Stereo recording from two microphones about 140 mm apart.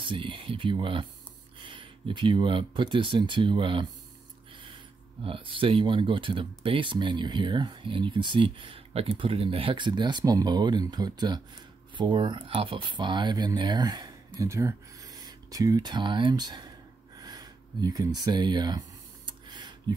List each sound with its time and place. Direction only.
0.0 s speech: 35° right (ahead or behind)
5.2 s speech: 40° right (ahead or behind)
17.2 s a sound: 30° right (ahead or behind)